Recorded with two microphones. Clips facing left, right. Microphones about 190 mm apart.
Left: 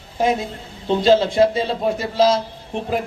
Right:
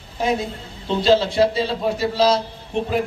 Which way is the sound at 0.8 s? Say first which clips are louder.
Left 2 dB; 50° left (ahead or behind).